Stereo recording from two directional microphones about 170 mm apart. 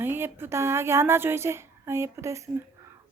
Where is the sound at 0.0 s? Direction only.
15° right (ahead or behind).